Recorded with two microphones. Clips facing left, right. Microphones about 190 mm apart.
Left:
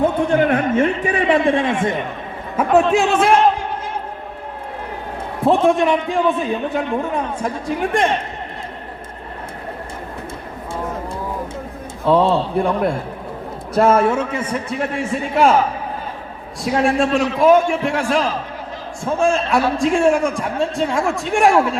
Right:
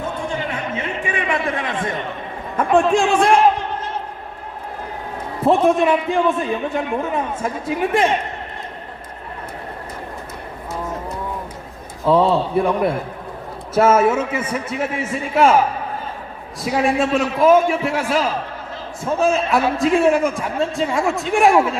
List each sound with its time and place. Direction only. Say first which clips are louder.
0.0 s a man's voice: left 9 dB; 60° left (ahead or behind); by 1.7 s 30° left (ahead or behind)
2.6 s a man's voice: left 1 dB; 5° left (ahead or behind)
5.4 s a man's voice: even; centre (ahead or behind)
12.1 s a man's voice: even; centre (ahead or behind)
16.6 s a man's voice: left 1 dB; centre (ahead or behind)